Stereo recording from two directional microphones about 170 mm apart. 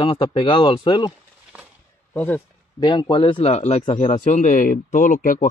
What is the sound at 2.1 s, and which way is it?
Speech, 10° left (ahead or behind).